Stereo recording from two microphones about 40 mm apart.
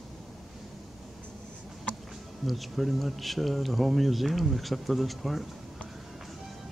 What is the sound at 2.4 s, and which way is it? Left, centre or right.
Speech, centre.